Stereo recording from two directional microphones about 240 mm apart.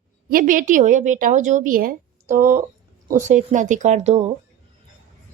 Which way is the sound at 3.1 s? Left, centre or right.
Right.